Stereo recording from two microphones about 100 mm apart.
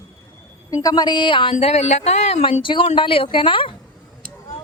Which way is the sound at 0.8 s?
45° left (ahead or behind).